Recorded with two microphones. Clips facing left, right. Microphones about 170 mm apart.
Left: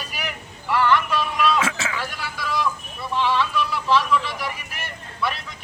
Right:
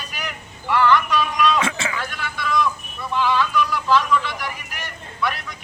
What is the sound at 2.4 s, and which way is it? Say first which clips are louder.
Vehicle: right 4 dB; 35° left (ahead or behind).